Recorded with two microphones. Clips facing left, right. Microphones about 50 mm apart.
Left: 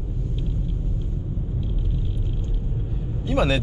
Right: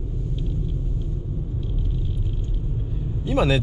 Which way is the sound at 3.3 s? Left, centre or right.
Centre.